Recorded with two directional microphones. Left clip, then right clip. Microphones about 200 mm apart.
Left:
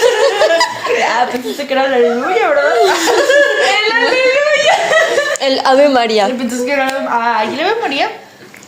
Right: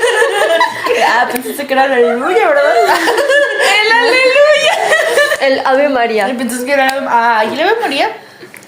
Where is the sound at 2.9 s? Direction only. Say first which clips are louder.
Even; 25° right (ahead or behind).